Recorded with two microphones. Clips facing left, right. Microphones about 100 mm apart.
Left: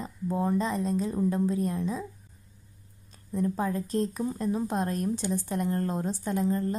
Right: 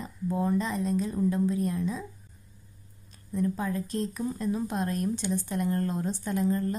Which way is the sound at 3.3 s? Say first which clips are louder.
Left 1 dB; 35° left (ahead or behind).